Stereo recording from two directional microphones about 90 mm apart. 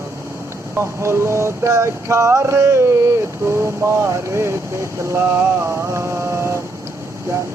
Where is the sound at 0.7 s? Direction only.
30° right (ahead or behind).